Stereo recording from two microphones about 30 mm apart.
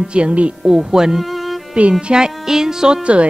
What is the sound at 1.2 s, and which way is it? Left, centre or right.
Music, centre.